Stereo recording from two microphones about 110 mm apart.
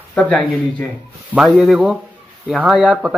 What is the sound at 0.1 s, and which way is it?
Speech, 10° left (ahead or behind).